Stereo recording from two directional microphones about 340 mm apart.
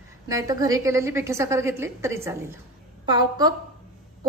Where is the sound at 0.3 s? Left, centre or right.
Centre.